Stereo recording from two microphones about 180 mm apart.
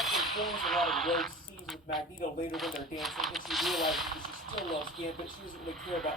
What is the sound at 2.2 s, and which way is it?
Speech, 50° left (ahead or behind).